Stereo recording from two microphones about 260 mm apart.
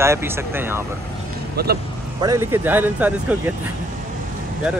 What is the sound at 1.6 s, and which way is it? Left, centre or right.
Speech, right.